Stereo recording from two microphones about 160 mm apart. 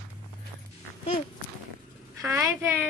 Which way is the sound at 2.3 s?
20° right (ahead or behind).